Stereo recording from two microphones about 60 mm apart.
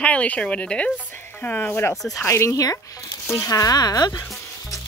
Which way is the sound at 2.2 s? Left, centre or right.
Left.